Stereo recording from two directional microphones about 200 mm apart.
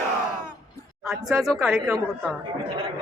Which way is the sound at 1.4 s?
Centre (ahead or behind).